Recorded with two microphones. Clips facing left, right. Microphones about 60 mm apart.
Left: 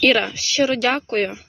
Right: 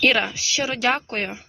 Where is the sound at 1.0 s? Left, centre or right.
Right.